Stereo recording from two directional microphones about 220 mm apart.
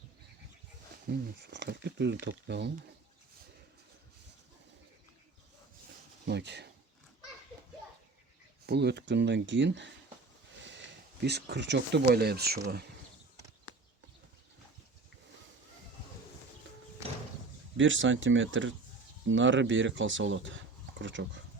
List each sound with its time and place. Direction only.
1.4 s speech: 50° right (ahead or behind)
6.2 s speech: 50° right (ahead or behind)
8.6 s speech: 50° right (ahead or behind)
17.7 s speech: 60° right (ahead or behind)